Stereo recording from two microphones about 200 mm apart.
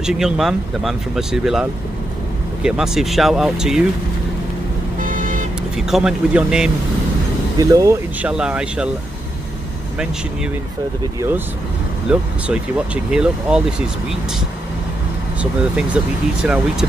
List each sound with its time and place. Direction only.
0.0 s speech: centre (ahead or behind)
4.9 s vehicle: 40° right (ahead or behind)
5.8 s speech: centre (ahead or behind)
7.5 s speech: 15° right (ahead or behind)
8.3 s speech: 5° right (ahead or behind)
12.1 s speech: 5° right (ahead or behind)
16.4 s speech: 5° right (ahead or behind)